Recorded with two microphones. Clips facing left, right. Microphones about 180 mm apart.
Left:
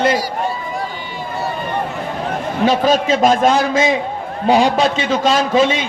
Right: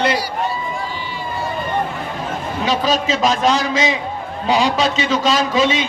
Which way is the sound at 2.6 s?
55° left (ahead or behind).